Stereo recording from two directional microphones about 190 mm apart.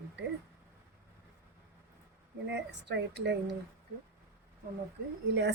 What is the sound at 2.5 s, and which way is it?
Speech, 65° right (ahead or behind).